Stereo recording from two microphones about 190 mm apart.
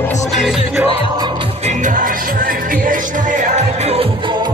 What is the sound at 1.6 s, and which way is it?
Music, 40° right (ahead or behind).